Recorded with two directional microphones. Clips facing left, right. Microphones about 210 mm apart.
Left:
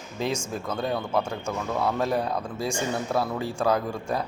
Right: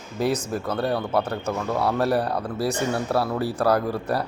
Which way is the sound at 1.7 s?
10° right (ahead or behind).